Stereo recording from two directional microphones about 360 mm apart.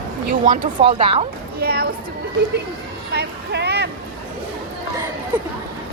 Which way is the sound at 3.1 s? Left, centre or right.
Right.